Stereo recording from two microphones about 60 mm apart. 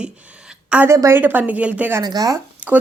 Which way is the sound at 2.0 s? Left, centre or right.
Right.